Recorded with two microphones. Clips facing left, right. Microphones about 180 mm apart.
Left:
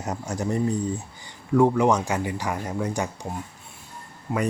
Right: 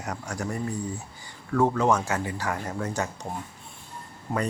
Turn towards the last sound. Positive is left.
turn(degrees=0)  # may be behind; listen again after turning